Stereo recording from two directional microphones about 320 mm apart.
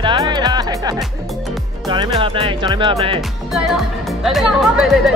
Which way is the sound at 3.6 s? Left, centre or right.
Centre.